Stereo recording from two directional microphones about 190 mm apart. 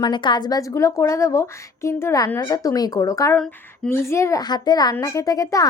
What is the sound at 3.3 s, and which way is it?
Speech, 5° left (ahead or behind).